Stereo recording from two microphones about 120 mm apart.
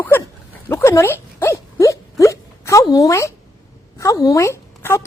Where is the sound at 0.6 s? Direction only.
20° left (ahead or behind).